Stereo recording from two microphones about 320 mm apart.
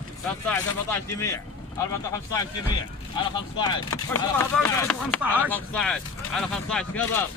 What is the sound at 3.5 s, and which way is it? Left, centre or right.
Speech, centre.